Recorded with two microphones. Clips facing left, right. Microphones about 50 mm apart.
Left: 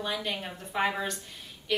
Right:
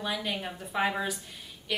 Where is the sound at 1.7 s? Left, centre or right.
Centre.